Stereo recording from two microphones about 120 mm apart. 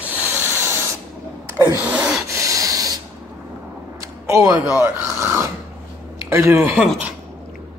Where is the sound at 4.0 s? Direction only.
25° right (ahead or behind).